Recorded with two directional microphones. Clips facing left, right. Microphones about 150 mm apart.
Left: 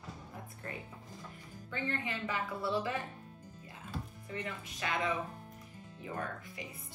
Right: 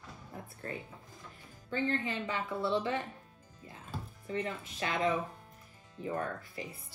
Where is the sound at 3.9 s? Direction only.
30° right (ahead or behind).